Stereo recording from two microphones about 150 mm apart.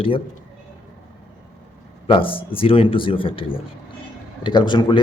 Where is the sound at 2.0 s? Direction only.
35° left (ahead or behind).